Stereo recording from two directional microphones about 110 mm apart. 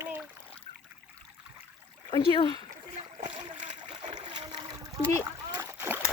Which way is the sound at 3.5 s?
90° right.